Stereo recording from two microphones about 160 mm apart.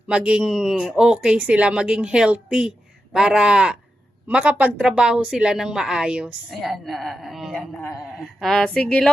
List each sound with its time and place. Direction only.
0.1 s speech: 5° right (ahead or behind)
7.8 s a man's voice: 15° left (ahead or behind)
8.2 s speech: centre (ahead or behind)